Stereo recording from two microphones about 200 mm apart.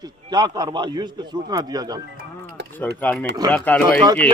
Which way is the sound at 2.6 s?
60° right (ahead or behind).